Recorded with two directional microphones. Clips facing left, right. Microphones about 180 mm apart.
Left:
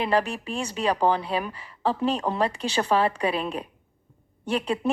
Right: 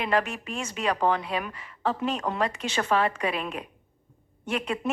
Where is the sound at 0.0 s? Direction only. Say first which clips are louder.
Left 2 dB; 35° left (ahead or behind).